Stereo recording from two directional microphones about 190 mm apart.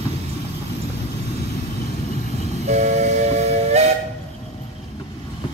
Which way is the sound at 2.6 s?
35° right (ahead or behind).